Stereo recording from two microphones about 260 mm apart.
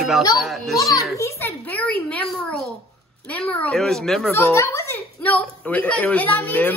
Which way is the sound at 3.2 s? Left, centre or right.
Centre.